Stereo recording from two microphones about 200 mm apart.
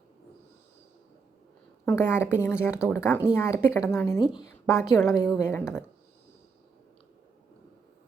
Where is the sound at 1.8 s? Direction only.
10° left (ahead or behind).